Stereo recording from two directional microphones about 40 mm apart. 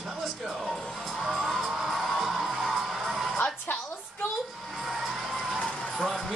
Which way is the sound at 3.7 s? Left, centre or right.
Left.